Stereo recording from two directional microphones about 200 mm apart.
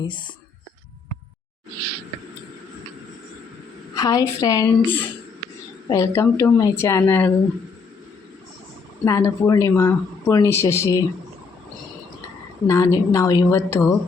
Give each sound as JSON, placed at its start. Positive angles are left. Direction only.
{"t": 0.0, "sound": "speech", "side_deg": 25}
{"t": 3.9, "sound": "speech", "side_deg": 15}
{"t": 9.0, "sound": "speech", "side_deg": 15}
{"t": 12.6, "sound": "speech", "side_deg": 15}